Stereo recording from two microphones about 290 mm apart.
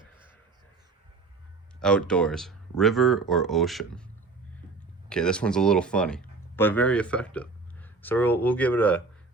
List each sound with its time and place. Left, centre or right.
1.8 s speech: centre
5.0 s speech: centre